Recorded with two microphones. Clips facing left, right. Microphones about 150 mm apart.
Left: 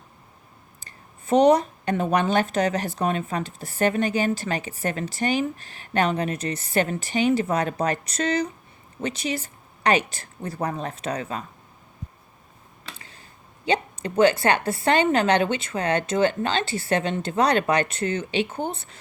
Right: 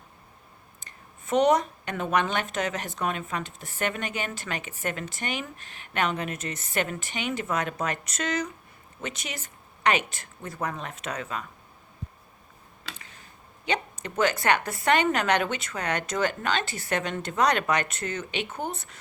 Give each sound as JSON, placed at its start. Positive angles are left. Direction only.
{"t": 0.8, "sound": "speech", "side_deg": 35}
{"t": 13.0, "sound": "a sound", "side_deg": 30}
{"t": 13.7, "sound": "speech", "side_deg": 30}